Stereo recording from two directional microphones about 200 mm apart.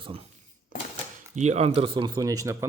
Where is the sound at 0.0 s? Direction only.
30° right (ahead or behind).